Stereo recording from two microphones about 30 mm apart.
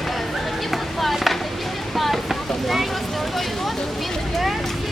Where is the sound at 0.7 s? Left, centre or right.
Centre.